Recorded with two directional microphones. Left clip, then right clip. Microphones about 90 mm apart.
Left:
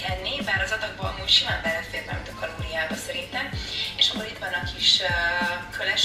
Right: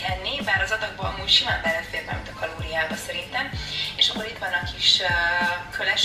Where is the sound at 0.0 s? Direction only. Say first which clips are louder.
Right 2 dB; 25° right (ahead or behind).